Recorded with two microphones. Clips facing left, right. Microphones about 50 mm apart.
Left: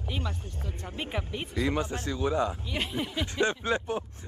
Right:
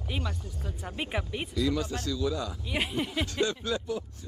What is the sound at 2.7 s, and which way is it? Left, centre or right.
Speech, centre.